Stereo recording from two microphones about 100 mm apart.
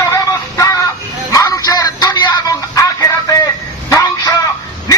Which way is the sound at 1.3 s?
40° left (ahead or behind).